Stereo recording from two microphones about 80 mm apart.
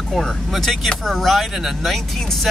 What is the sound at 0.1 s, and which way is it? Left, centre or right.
Speech, centre.